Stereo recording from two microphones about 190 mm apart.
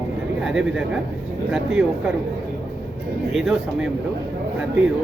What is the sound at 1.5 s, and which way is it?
Speech, 5° right (ahead or behind).